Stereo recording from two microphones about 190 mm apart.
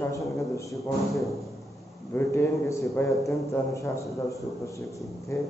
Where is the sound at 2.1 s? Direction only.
15° left (ahead or behind).